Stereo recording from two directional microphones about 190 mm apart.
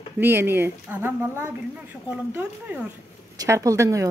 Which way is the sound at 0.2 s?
10° right (ahead or behind).